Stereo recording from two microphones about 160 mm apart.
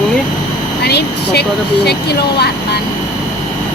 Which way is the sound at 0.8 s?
90° left.